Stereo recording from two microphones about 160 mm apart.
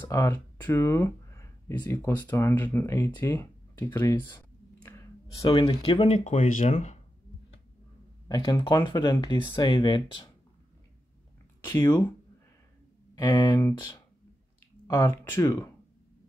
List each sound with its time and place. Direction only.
0.1 s speech: 20° left (ahead or behind)
4.8 s a sound: 20° left (ahead or behind)
5.5 s speech: 30° left (ahead or behind); by 7.0 s 50° left (ahead or behind)
8.3 s speech: 25° left (ahead or behind)
13.1 s speech: 30° left (ahead or behind)
14.9 s speech: 20° left (ahead or behind)